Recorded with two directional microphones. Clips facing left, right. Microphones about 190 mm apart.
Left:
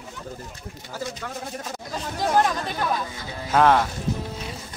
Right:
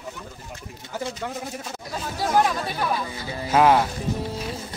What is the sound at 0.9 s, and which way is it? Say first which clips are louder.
A man's voice: right 3 dB; 20° right (ahead or behind).